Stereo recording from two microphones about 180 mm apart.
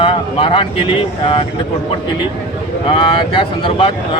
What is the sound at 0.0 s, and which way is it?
Speech, 30° left (ahead or behind).